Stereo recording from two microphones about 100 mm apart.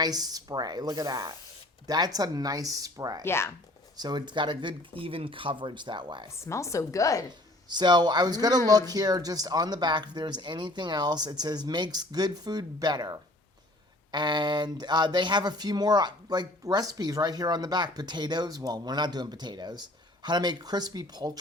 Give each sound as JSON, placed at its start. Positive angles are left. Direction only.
{"t": 0.0, "sound": "speech", "side_deg": -40}
{"t": 3.2, "sound": "speech", "side_deg": 25}
{"t": 3.9, "sound": "speech", "side_deg": -45}
{"t": 6.3, "sound": "speech", "side_deg": 30}
{"t": 7.3, "sound": "speech", "side_deg": -45}